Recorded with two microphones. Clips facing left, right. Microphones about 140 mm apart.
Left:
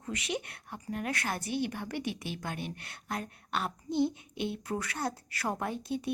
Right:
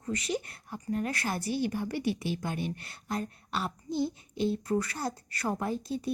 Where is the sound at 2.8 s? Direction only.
Centre (ahead or behind).